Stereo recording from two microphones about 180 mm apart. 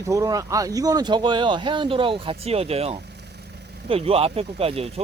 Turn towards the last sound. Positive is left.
turn(degrees=-30)  # may be behind; listen again after turning